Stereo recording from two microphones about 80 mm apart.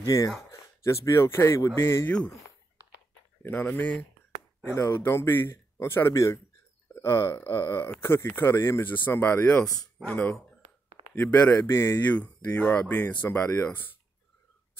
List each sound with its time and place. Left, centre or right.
0.0 s speech: left
2.0 s speech: centre
3.4 s speech: left
4.6 s speech: left
11.3 s speech: left
12.1 s speech: centre